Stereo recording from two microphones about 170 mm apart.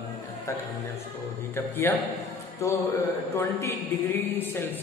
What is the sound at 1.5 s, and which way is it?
Speech, 15° left (ahead or behind).